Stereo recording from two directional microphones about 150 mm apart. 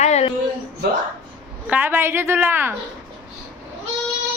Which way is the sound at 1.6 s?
10° right (ahead or behind).